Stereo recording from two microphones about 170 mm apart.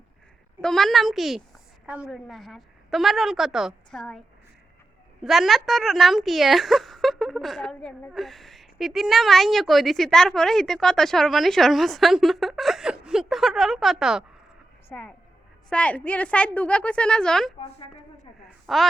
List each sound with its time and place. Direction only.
0.6 s a woman's voice: centre (ahead or behind)
5.2 s a woman's voice: centre (ahead or behind)
14.8 s a woman's voice: 10° left (ahead or behind)
17.6 s a woman's voice: 35° left (ahead or behind)
18.6 s a woman's voice: centre (ahead or behind)